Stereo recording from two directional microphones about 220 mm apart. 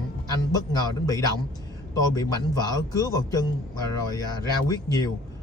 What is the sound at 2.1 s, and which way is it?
Speech, 15° left (ahead or behind).